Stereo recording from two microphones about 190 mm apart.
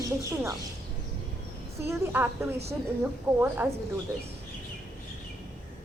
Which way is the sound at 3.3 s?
25° right (ahead or behind).